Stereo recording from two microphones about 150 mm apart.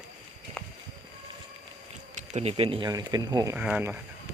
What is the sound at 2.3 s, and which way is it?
Speech, 40° right (ahead or behind).